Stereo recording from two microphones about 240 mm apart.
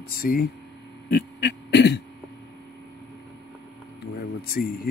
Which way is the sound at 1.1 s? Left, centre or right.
Left.